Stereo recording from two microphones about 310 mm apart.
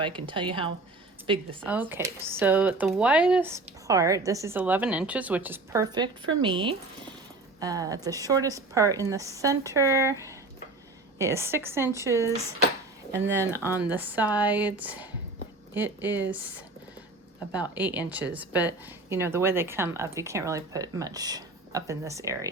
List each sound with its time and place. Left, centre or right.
0.0 s speech: centre
1.6 s speech: centre
11.2 s speech: centre
17.5 s speech: centre